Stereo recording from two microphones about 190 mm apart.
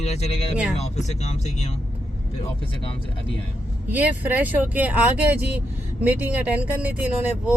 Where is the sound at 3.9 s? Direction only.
10° right (ahead or behind).